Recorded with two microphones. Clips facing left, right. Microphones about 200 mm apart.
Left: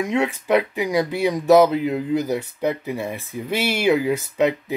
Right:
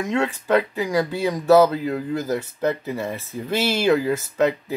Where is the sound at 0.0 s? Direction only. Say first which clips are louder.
Left 1 dB; 15° left (ahead or behind).